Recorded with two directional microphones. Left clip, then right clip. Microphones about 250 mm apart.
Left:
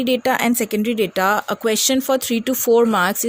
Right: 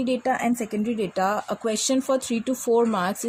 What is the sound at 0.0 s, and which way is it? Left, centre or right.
A woman's voice, left.